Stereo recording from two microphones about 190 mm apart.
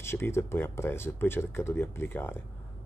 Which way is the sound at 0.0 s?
15° left (ahead or behind).